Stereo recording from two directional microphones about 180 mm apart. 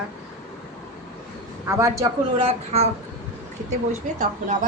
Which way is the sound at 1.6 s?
15° right (ahead or behind).